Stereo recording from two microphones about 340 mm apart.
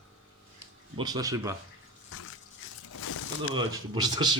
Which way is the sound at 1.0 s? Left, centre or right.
Centre.